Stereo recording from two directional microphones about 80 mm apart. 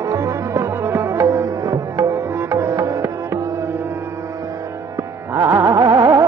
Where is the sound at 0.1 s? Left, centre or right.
Right.